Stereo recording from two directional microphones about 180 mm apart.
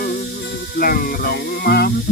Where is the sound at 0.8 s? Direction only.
55° left (ahead or behind).